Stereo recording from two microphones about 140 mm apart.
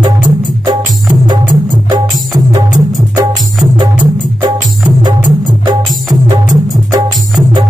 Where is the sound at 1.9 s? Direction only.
30° right (ahead or behind).